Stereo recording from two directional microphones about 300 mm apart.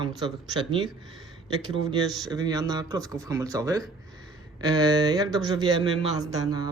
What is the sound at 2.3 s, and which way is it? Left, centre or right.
Speech, centre.